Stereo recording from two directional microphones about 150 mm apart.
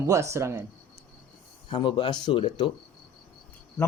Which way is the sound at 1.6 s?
35° left (ahead or behind).